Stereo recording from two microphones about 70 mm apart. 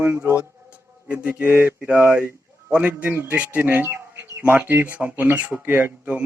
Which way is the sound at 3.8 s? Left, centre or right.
Right.